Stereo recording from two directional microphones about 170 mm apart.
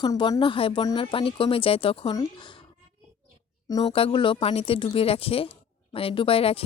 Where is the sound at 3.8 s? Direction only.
35° left (ahead or behind).